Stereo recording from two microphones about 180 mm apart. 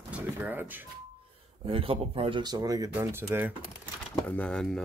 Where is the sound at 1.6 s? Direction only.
30° right (ahead or behind); by 3.5 s 10° right (ahead or behind).